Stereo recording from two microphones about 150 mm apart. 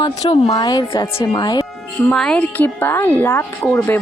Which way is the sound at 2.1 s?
5° left (ahead or behind).